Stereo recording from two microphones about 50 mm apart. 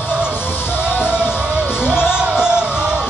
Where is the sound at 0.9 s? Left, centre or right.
Left.